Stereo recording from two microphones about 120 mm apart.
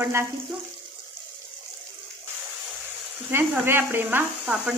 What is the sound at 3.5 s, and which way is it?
Speech, 15° right (ahead or behind).